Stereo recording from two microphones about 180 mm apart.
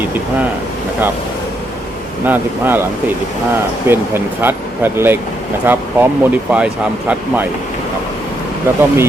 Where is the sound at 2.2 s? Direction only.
10° right (ahead or behind).